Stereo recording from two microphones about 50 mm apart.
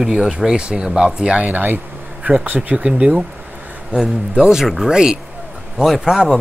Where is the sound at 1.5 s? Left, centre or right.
Right.